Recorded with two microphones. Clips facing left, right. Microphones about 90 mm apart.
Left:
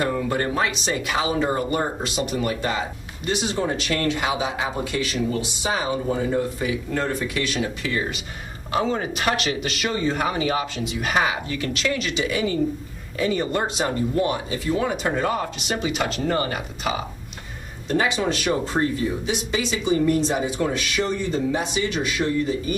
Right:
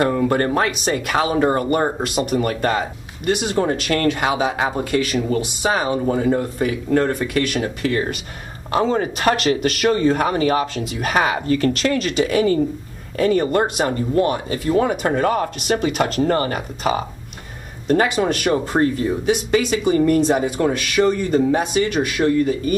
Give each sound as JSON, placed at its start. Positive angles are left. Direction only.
{"t": 0.0, "sound": "speech", "side_deg": -50}
{"t": 8.7, "sound": "speech", "side_deg": -40}
{"t": 17.8, "sound": "speech", "side_deg": -50}